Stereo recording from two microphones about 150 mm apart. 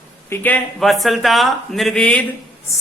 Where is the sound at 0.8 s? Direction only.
Centre (ahead or behind).